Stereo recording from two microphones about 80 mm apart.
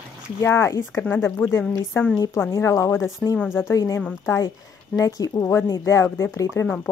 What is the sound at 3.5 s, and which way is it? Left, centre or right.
A woman's voice, left.